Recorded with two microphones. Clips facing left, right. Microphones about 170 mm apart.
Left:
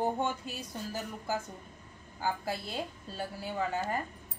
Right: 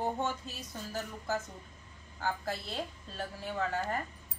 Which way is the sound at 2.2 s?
10° left (ahead or behind).